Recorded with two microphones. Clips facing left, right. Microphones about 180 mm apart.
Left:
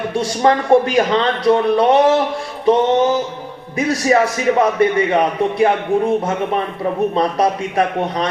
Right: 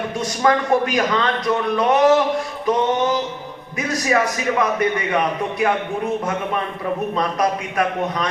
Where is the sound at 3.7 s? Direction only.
30° left (ahead or behind).